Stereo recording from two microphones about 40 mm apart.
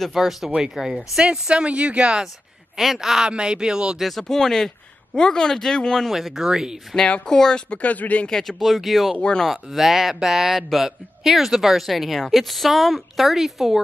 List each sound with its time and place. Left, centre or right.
0.1 s a man's voice: centre
1.2 s speech: right
2.8 s speech: centre
3.3 s speech: right
4.2 s speech: centre
6.1 s speech: centre
7.2 s speech: centre
7.8 s speech: left
8.3 s speech: centre
8.5 s a man's voice: centre